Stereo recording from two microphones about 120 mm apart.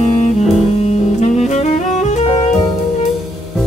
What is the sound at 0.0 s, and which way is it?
Music, 80° left.